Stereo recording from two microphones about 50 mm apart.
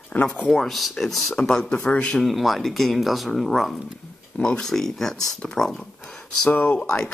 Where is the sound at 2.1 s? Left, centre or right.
Centre.